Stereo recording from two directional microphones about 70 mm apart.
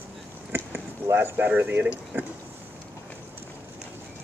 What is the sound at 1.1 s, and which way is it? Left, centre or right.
Speech, right.